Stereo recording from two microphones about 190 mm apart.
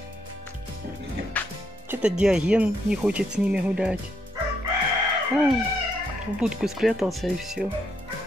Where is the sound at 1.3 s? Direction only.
10° left (ahead or behind).